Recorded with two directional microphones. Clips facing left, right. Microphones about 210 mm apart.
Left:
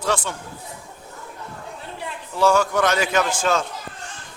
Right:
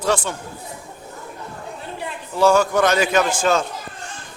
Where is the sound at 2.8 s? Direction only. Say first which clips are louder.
Right 3 dB; 40° right (ahead or behind).